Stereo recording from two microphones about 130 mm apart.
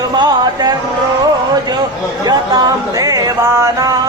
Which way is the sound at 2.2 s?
30° right (ahead or behind).